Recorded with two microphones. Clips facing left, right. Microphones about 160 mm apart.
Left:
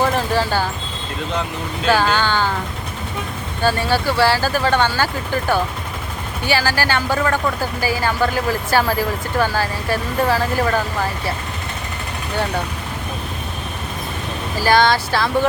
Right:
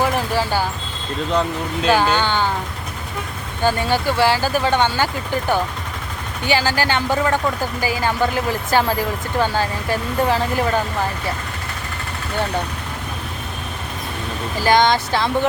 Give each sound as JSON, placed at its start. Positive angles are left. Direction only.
{"t": 0.0, "sound": "a sound", "side_deg": -15}
{"t": 1.9, "sound": "speech", "side_deg": -15}
{"t": 3.6, "sound": "speech", "side_deg": -15}
{"t": 6.4, "sound": "speech", "side_deg": -20}
{"t": 14.6, "sound": "speech", "side_deg": -20}